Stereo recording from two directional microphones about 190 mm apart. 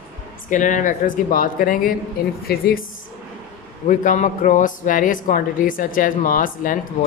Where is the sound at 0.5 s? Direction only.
40° left (ahead or behind).